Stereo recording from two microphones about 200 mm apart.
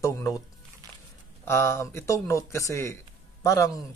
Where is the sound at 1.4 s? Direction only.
10° left (ahead or behind).